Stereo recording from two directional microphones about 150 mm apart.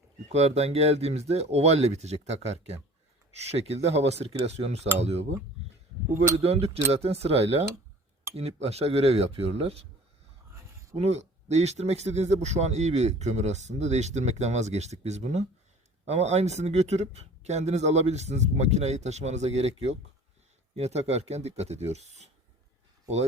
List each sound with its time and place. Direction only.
0.3 s speech: 45° right (ahead or behind)
6.4 s speech: 45° right (ahead or behind)
10.5 s a sound: 20° right (ahead or behind)
10.9 s speech: 45° right (ahead or behind)